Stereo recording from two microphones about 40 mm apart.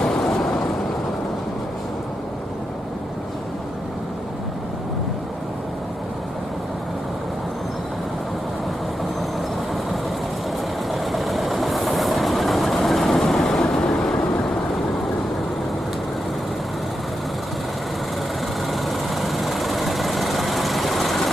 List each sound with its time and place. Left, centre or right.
0.0 s vehicle: centre
10.9 s train: centre
18.7 s vehicle: centre